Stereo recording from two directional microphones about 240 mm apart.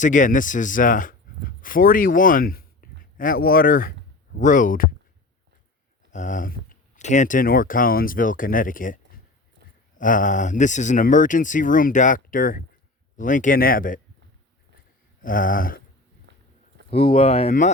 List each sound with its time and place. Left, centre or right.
0.0 s speech: left
6.1 s speech: left
10.0 s speech: left
15.2 s speech: left
16.3 s a sound: right
16.9 s speech: left